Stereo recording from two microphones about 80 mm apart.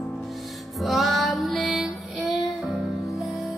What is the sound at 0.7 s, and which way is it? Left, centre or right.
Music, centre.